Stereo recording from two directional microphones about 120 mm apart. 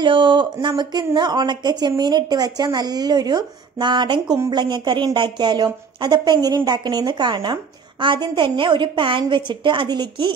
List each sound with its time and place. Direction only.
0.0 s a woman's voice: 40° right (ahead or behind)